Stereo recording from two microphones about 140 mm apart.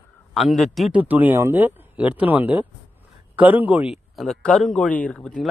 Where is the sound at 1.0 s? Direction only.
10° right (ahead or behind).